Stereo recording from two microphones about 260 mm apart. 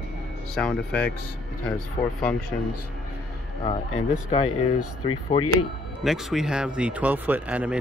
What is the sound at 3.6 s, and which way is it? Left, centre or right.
Speech, left.